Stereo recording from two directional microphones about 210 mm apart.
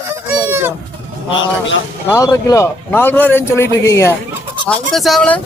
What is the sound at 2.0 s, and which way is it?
A man's voice, 15° left (ahead or behind).